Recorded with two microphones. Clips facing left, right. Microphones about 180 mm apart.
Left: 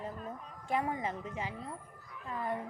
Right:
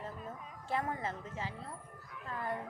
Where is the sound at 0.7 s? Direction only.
15° left (ahead or behind).